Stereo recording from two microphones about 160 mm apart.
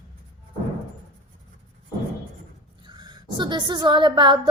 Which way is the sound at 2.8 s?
25° right (ahead or behind).